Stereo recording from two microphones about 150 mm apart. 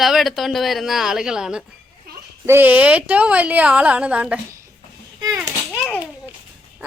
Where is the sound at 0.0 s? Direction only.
Centre (ahead or behind).